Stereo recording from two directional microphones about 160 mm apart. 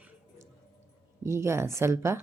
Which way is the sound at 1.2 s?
15° right (ahead or behind).